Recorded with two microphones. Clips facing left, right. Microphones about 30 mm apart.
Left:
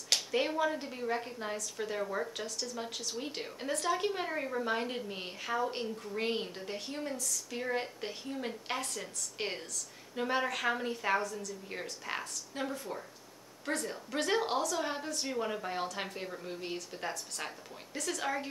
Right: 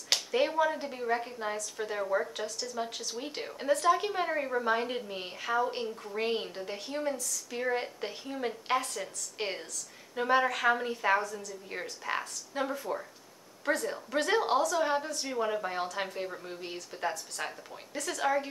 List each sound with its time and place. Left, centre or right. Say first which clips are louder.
0.3 s a woman's voice: right 5 dB; centre